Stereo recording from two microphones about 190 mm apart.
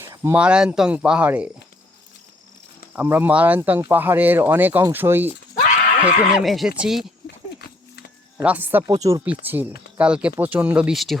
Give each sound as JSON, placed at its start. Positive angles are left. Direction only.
{"t": 0.0, "sound": "speech", "side_deg": -15}
{"t": 2.9, "sound": "speech", "side_deg": -10}
{"t": 8.4, "sound": "speech", "side_deg": -10}